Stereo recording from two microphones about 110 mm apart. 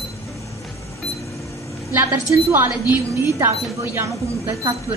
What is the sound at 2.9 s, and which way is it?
A woman's voice, 25° right (ahead or behind).